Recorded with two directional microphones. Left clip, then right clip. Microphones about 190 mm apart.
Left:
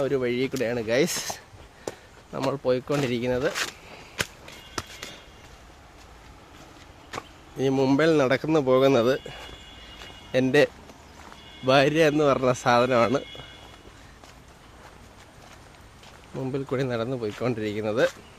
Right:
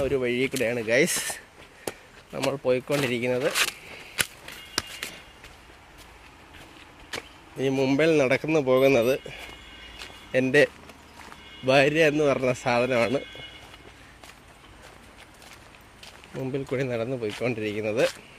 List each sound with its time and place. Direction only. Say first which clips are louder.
0.0 s speech: even; 5° left (ahead or behind)
2.3 s speech: even; 10° left (ahead or behind)
3.5 s a sound: right 4 dB; 50° right (ahead or behind)
4.7 s walk: right 4 dB; 45° right (ahead or behind)
7.2 s speech: left 2 dB; 10° left (ahead or behind)
10.3 s speech: even; 10° left (ahead or behind)
16.4 s speech: left 1 dB; 5° left (ahead or behind)